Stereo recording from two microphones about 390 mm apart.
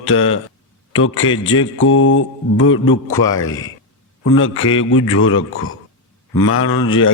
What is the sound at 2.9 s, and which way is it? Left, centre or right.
Speech, centre.